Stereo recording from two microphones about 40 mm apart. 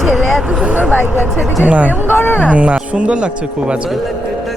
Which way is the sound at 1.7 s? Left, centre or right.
Right.